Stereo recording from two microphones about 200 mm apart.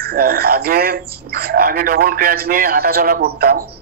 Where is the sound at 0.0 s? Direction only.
50° right (ahead or behind).